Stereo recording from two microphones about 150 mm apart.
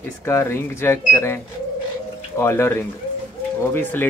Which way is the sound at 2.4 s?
15° left (ahead or behind).